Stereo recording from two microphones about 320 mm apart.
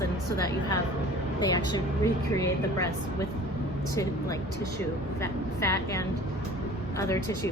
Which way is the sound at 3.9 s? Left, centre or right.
Centre.